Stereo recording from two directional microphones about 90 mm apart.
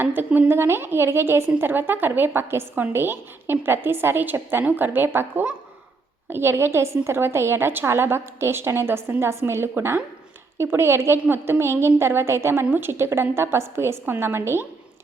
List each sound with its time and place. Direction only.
0.0 s a woman's voice: 20° right (ahead or behind)